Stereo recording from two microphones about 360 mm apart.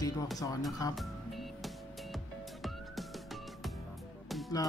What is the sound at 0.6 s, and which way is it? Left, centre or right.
Music, centre.